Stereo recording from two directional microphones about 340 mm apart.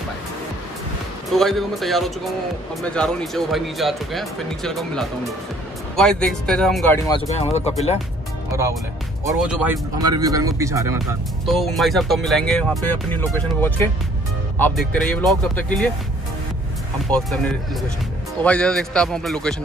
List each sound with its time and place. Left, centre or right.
1.3 s speech: centre
7.2 s speech: centre
9.3 s speech: centre
17.1 s speech: centre